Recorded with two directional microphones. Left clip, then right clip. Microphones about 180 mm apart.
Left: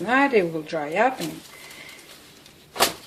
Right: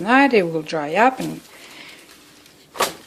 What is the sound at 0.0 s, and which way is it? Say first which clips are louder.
A woman's voice: right 4 dB; 40° right (ahead or behind).